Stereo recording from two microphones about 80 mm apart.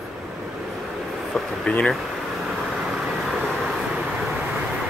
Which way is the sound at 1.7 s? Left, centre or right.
Centre.